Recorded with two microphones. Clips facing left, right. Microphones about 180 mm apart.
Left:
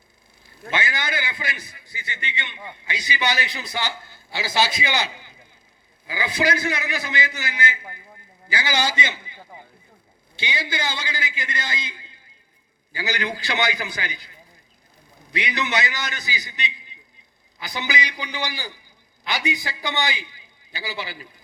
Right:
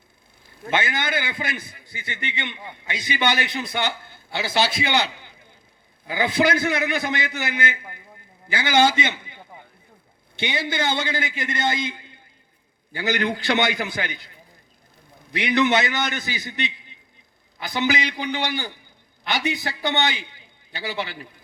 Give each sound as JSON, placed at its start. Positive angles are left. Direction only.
{"t": 0.9, "sound": "a man's voice", "side_deg": -55}
{"t": 15.4, "sound": "a man's voice", "side_deg": -55}